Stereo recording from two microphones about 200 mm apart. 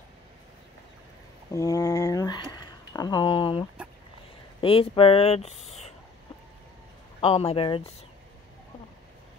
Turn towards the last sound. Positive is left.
turn(degrees=30)  # may be behind; listen again after turning